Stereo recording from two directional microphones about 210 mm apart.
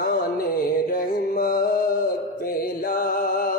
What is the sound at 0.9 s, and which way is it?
Music, 40° left (ahead or behind).